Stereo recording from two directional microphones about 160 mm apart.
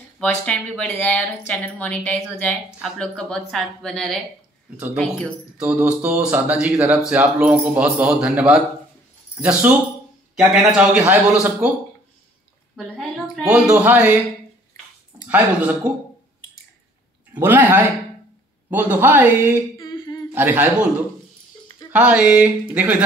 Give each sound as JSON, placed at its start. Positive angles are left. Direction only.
{"t": 0.2, "sound": "a woman's voice", "side_deg": 10}
{"t": 5.7, "sound": "a man's voice", "side_deg": -10}
{"t": 12.7, "sound": "a woman's voice", "side_deg": 5}
{"t": 13.5, "sound": "a man's voice", "side_deg": -10}
{"t": 15.2, "sound": "a man's voice", "side_deg": -10}
{"t": 17.3, "sound": "a man's voice", "side_deg": -10}
{"t": 19.8, "sound": "humming", "side_deg": 25}
{"t": 20.3, "sound": "a man's voice", "side_deg": -10}
{"t": 21.9, "sound": "a man's voice", "side_deg": -10}